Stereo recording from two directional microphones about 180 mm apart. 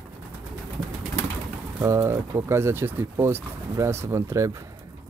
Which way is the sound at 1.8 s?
15° right (ahead or behind).